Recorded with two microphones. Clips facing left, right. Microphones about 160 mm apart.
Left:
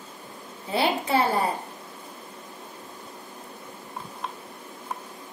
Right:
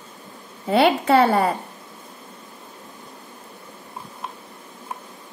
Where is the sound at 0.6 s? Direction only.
65° right (ahead or behind).